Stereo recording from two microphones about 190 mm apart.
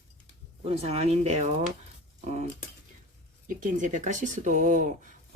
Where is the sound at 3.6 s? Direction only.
40° right (ahead or behind).